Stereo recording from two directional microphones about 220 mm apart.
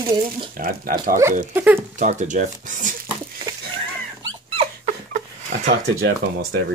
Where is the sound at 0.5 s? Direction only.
40° right (ahead or behind).